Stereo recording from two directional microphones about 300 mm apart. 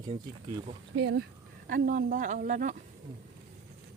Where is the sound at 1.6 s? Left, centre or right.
Right.